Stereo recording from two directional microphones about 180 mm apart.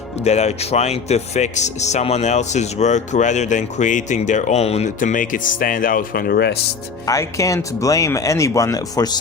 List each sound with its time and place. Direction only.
0.3 s speech: 35° left (ahead or behind); by 6.6 s 65° left (ahead or behind)
7.0 s speech: 15° left (ahead or behind)